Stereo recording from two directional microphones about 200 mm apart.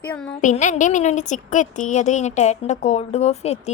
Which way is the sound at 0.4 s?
40° left (ahead or behind).